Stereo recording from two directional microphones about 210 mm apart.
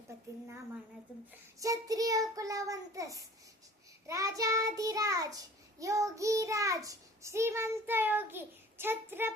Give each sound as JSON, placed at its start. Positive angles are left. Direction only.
{"t": 1.5, "sound": "child singing", "side_deg": -15}